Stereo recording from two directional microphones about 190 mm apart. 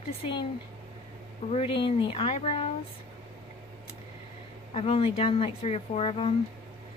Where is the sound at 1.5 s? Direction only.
30° left (ahead or behind).